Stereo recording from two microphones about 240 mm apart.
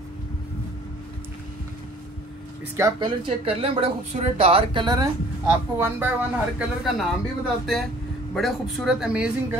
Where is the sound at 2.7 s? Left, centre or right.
Centre.